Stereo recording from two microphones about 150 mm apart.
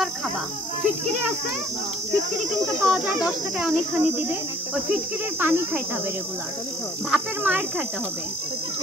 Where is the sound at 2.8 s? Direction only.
Centre (ahead or behind).